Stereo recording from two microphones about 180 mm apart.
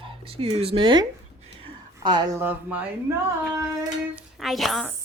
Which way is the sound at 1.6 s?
25° right (ahead or behind).